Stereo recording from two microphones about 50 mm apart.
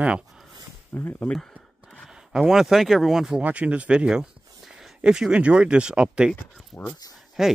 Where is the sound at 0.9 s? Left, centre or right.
Left.